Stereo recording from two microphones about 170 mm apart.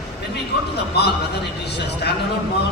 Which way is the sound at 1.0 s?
75° left (ahead or behind).